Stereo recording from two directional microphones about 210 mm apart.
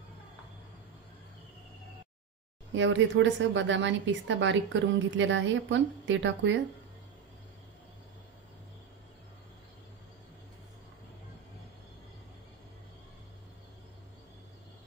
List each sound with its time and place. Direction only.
2.7 s a woman's voice: 60° right (ahead or behind)